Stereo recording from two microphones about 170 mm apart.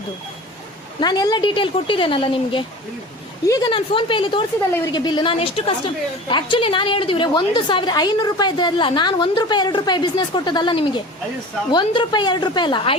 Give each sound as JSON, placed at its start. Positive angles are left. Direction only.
{"t": 0.9, "sound": "a woman's voice", "side_deg": 25}